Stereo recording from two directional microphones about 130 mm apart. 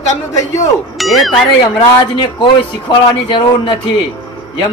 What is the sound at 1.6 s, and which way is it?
Speech, 35° left (ahead or behind).